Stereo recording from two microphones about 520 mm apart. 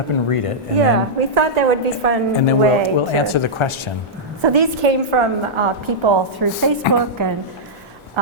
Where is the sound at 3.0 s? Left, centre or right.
Left.